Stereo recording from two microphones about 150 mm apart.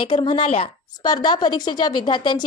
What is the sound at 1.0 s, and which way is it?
A woman's voice, 30° left (ahead or behind).